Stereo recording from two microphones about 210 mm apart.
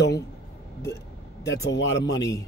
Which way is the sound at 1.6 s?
60° left (ahead or behind).